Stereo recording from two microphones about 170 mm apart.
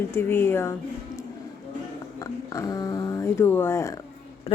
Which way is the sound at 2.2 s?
20° left (ahead or behind).